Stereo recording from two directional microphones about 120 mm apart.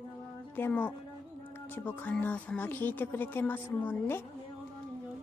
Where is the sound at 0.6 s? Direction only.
15° left (ahead or behind).